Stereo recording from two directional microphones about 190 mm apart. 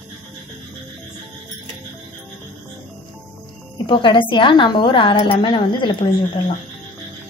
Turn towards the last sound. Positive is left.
turn(degrees=25)  # may be behind; listen again after turning